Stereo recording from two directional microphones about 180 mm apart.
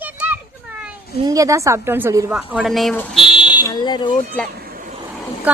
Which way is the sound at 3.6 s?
25° left (ahead or behind).